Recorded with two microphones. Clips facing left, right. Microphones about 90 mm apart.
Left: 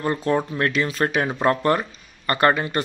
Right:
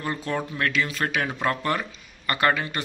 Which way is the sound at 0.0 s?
30° left (ahead or behind).